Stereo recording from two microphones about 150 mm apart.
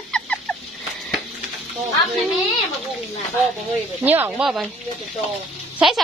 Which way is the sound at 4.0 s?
10° right (ahead or behind).